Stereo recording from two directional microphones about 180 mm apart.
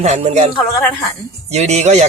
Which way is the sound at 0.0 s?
35° right (ahead or behind).